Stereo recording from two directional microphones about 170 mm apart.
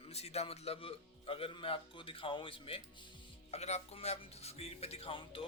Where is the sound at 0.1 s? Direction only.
35° left (ahead or behind).